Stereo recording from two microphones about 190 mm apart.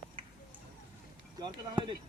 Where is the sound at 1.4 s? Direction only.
25° right (ahead or behind).